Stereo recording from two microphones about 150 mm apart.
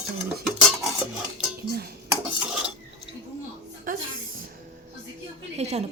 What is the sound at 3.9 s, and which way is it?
Music, 70° right (ahead or behind).